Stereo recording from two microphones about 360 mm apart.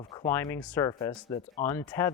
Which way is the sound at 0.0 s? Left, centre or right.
Centre.